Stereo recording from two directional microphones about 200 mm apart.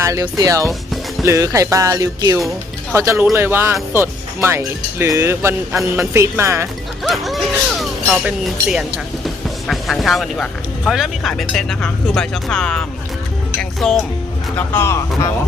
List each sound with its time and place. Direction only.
0.0 s speech: 15° right (ahead or behind)
7.0 s speech: centre (ahead or behind)